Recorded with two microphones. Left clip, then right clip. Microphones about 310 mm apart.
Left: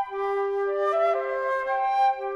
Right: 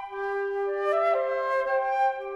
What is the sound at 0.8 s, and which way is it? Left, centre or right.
Music, centre.